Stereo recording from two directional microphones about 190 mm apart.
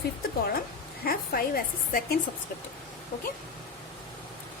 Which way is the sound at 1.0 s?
50° left (ahead or behind).